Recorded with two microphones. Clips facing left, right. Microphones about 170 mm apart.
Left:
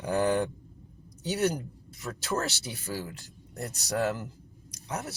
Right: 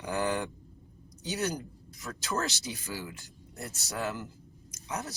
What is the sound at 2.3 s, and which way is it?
Speech, 30° left (ahead or behind).